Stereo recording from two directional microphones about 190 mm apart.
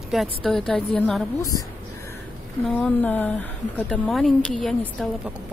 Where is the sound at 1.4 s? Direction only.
20° left (ahead or behind).